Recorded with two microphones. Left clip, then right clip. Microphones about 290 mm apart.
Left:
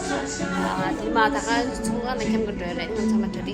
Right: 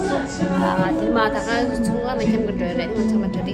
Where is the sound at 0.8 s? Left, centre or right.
Centre.